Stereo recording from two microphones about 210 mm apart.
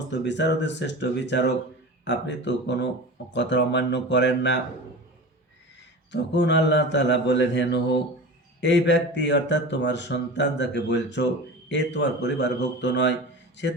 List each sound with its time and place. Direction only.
0.1 s speech: 55° left (ahead or behind)
6.1 s speech: 55° left (ahead or behind)